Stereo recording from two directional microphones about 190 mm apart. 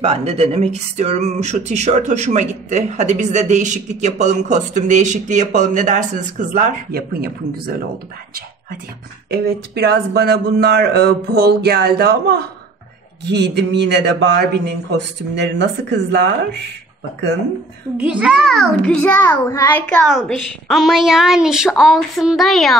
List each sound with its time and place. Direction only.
0.0 s speech: 30° right (ahead or behind); by 7.7 s 50° right (ahead or behind)
9.3 s speech: 55° right (ahead or behind)
17.9 s a woman's voice: 5° right (ahead or behind); by 19.8 s 15° left (ahead or behind)
19.9 s a woman's voice: centre (ahead or behind)